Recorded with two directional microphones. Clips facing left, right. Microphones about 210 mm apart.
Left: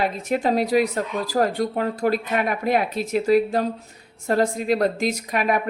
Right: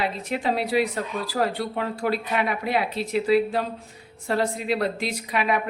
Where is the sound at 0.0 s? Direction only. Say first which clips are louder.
Left 4 dB; 45° left (ahead or behind).